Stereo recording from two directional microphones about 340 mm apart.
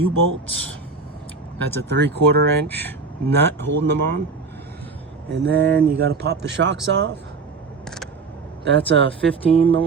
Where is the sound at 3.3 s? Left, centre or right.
Right.